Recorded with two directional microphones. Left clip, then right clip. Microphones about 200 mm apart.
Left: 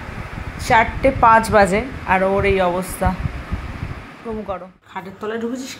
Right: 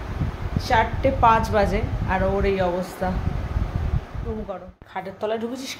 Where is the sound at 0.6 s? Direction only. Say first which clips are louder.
Left 6 dB; 30° left (ahead or behind).